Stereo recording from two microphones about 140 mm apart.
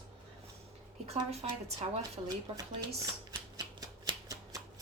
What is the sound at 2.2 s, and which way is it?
Speech, 35° right (ahead or behind).